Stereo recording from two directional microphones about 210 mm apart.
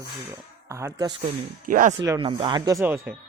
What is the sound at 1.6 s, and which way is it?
Speech, 40° right (ahead or behind).